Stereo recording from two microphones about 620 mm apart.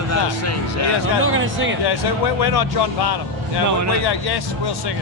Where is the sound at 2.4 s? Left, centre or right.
Left.